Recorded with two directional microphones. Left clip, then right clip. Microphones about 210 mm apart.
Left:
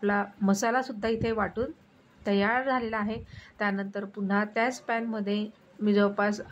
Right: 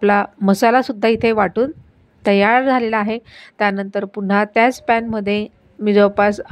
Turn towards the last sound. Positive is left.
turn(degrees=-35)  # may be behind; listen again after turning